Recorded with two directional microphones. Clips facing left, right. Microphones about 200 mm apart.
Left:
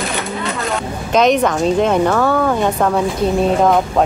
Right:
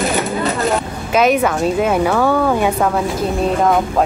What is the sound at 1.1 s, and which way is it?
Speech, 5° right (ahead or behind).